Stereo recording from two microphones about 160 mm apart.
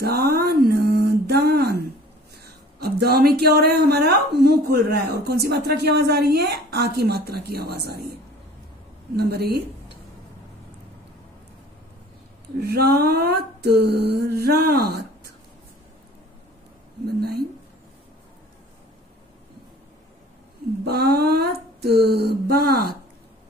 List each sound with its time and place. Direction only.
0.0 s a sound: 75° right (ahead or behind)
2.4 s speech: 75° right (ahead or behind)
9.1 s speech: 80° right
12.5 s speech: 90° right
17.2 s speech: 75° right (ahead or behind)
20.8 s speech: 80° right